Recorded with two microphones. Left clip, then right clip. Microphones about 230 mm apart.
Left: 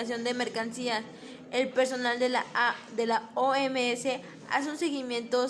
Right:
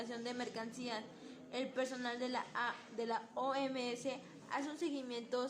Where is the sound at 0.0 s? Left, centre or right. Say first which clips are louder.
Left 12 dB; left.